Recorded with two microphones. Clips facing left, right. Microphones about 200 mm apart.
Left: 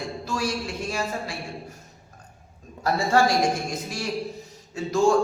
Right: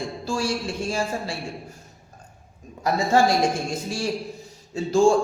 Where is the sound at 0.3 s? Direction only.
30° right (ahead or behind).